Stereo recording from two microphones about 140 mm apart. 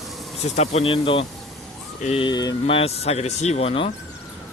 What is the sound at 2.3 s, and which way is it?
Speech, 25° left (ahead or behind).